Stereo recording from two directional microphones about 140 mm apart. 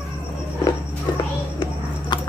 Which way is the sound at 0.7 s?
30° left (ahead or behind).